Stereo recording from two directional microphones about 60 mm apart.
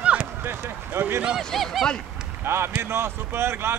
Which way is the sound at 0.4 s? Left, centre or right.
Right.